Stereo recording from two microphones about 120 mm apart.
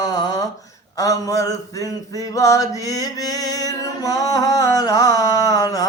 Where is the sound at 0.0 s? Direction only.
35° left (ahead or behind).